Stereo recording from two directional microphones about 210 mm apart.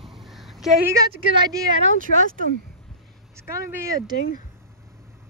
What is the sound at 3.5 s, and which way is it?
Speech, 15° right (ahead or behind).